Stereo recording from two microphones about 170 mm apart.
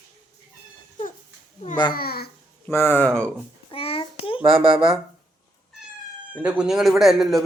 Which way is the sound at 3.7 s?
35° left (ahead or behind).